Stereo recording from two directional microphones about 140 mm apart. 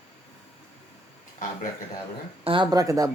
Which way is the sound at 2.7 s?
25° right (ahead or behind).